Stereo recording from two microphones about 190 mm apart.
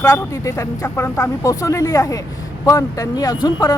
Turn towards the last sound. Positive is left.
turn(degrees=20)  # may be behind; listen again after turning